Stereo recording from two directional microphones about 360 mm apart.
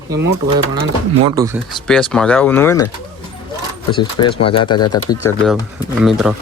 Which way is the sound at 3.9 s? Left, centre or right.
Centre.